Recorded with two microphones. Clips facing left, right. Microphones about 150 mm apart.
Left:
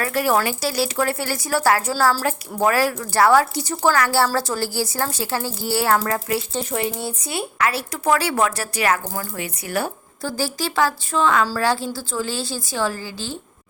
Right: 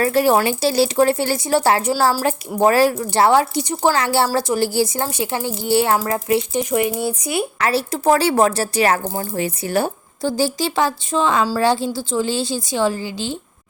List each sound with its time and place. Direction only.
0.0 s a woman's voice: 25° right (ahead or behind)
7.6 s speech: 30° right (ahead or behind)